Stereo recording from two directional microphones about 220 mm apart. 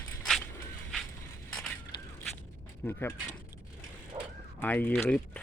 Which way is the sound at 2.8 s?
10° left (ahead or behind).